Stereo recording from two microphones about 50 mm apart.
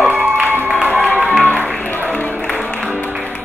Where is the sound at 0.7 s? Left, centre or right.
Right.